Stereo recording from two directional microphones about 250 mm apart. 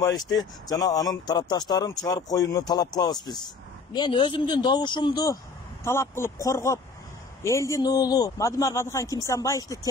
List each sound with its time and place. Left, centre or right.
0.4 s speech: centre